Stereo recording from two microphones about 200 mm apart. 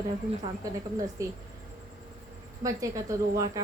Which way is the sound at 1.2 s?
15° right (ahead or behind).